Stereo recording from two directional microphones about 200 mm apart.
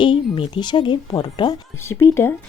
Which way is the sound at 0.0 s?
25° left (ahead or behind).